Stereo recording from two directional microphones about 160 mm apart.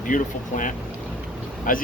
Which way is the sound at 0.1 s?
55° left (ahead or behind).